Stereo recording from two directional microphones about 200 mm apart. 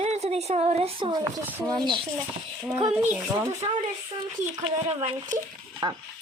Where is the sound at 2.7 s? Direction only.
10° right (ahead or behind).